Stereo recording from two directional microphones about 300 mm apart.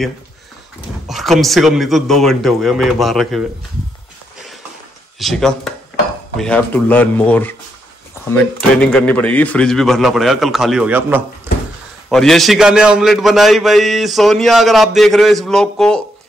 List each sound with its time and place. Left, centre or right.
1.0 s a man's voice: centre
5.2 s a man's voice: centre
11.5 s a sound: centre
12.1 s a man's voice: centre